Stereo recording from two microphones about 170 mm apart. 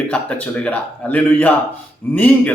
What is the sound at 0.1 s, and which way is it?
A man's voice, 5° left (ahead or behind).